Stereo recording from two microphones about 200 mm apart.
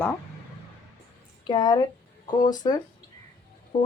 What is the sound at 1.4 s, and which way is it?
Speech, 20° left (ahead or behind).